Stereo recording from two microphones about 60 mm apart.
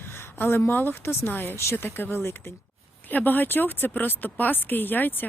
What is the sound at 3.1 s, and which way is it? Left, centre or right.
Speech, left.